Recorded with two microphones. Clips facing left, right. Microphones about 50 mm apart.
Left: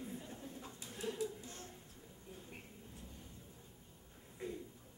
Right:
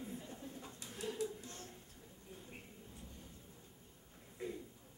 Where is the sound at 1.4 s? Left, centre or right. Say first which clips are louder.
Even; centre.